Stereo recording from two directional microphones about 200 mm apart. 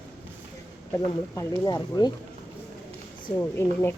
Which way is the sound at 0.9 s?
15° left (ahead or behind).